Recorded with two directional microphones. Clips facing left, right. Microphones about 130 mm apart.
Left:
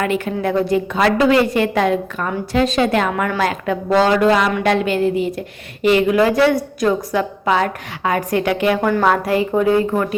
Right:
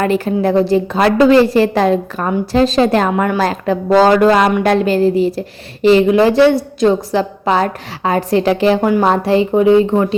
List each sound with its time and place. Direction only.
0.0 s a woman's voice: 35° right (ahead or behind)
4.1 s a sound: 50° right (ahead or behind)
4.6 s a woman's voice: 40° right (ahead or behind)